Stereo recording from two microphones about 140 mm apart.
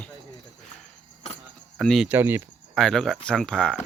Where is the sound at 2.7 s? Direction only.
5° left (ahead or behind).